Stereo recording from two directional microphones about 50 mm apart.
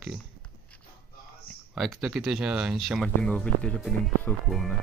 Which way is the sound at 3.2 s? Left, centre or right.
Left.